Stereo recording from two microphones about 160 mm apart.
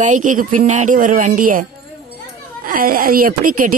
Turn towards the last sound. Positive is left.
turn(degrees=-60)  # may be behind; listen again after turning